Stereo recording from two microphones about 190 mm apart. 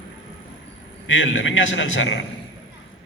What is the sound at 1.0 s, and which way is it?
A man's voice, 90° left.